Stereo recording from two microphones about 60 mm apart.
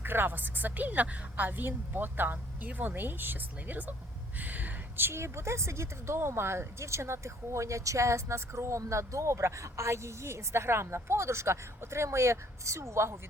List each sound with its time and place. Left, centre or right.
0.0 s a woman's voice: right